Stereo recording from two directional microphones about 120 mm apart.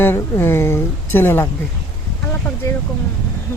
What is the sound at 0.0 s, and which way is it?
Speech, 20° left (ahead or behind).